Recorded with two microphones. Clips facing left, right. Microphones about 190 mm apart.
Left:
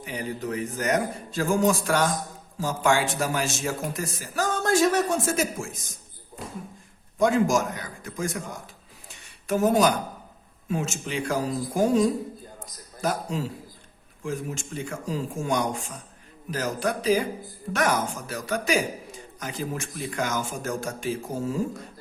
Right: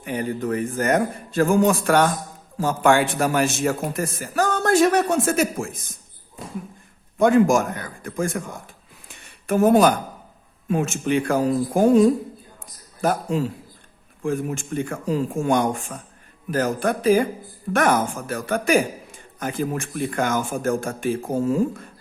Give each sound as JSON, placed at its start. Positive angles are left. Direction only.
{"t": 0.0, "sound": "a man's voice", "side_deg": -55}
{"t": 7.2, "sound": "a man's voice", "side_deg": -55}